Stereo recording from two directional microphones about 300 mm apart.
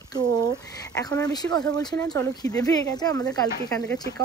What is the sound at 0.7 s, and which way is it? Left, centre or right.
Speech, centre.